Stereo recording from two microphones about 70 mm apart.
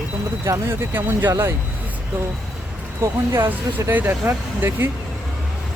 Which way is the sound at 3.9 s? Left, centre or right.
Right.